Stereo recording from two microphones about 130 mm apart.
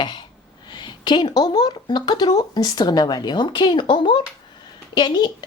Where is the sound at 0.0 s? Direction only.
35° left (ahead or behind).